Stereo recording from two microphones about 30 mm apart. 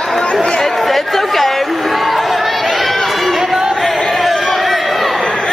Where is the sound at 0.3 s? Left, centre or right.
Left.